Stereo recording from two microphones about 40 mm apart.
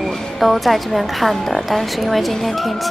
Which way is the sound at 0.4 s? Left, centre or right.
Centre.